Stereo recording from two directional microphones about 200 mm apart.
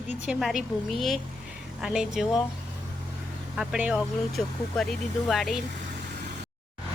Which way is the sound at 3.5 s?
5° right (ahead or behind).